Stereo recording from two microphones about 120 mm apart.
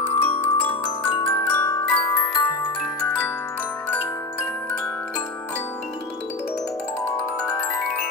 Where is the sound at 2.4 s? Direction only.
30° left (ahead or behind).